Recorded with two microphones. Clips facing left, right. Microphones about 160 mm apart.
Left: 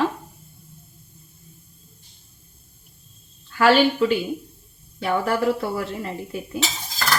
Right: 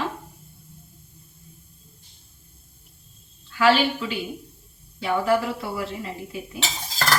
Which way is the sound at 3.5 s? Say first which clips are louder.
Left 3 dB; 50° left (ahead or behind).